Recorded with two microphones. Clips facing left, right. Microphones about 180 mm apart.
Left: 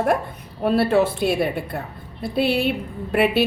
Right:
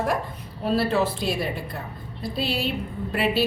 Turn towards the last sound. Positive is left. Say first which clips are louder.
# left 5 dB
turn(degrees=60)  # may be behind; listen again after turning